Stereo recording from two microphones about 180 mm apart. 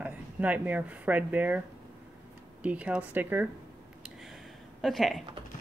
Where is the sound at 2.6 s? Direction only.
5° right (ahead or behind).